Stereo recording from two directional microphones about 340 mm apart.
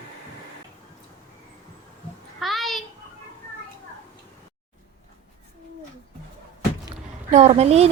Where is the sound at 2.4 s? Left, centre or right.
Centre.